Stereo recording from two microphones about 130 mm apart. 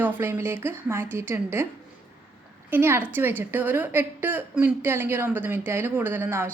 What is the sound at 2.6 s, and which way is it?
A woman's voice, 15° right (ahead or behind).